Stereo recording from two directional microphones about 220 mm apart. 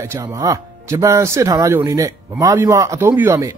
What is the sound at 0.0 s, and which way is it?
Speech, 15° right (ahead or behind).